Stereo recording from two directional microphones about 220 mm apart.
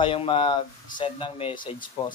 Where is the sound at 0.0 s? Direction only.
25° left (ahead or behind).